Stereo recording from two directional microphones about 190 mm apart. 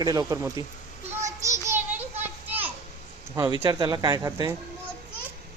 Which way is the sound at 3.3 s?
20° right (ahead or behind).